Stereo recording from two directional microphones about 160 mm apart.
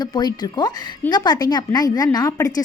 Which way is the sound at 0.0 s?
25° left (ahead or behind).